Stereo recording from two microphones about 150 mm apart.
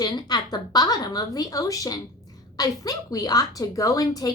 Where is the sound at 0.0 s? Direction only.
30° left (ahead or behind).